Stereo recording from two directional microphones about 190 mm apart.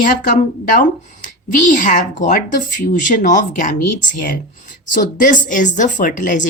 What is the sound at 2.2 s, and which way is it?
A woman's voice, 45° left (ahead or behind).